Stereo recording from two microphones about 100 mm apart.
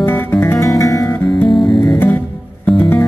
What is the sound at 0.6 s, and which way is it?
Music, 35° left (ahead or behind).